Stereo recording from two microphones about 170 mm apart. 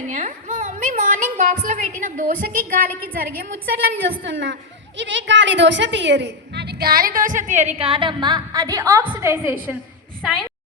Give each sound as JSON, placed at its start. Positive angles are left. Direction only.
{"t": 0.1, "sound": "a woman's voice", "side_deg": -45}
{"t": 4.2, "sound": "a woman's voice", "side_deg": -90}
{"t": 10.2, "sound": "a woman's voice", "side_deg": 5}